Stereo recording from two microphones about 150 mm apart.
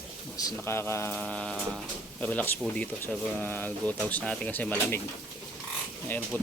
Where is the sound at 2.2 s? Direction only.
10° left (ahead or behind).